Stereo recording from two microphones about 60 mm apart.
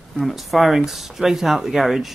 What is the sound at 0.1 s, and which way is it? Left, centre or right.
Speech, centre.